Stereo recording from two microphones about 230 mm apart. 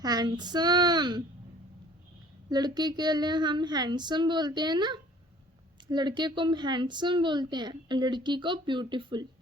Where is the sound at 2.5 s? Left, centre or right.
Centre.